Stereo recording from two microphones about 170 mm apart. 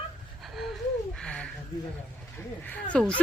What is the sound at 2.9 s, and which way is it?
Speech, 5° left (ahead or behind).